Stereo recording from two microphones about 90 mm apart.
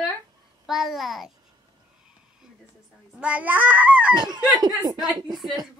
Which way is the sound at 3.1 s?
15° right (ahead or behind).